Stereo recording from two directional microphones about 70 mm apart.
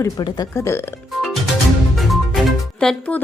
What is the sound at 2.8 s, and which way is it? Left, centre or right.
Speech, centre.